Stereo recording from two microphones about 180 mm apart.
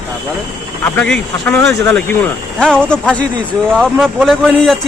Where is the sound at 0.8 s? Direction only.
10° left (ahead or behind).